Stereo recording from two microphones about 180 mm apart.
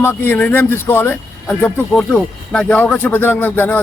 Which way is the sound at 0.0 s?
10° left (ahead or behind).